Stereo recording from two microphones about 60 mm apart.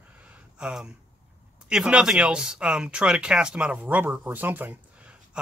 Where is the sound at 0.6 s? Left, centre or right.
Centre.